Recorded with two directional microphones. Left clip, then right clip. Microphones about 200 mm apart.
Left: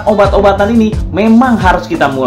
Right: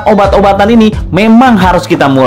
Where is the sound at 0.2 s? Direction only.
40° right (ahead or behind).